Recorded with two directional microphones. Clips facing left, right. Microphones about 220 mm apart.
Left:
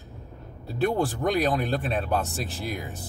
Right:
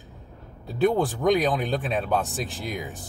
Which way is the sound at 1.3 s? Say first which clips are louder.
Right 3 dB; centre (ahead or behind).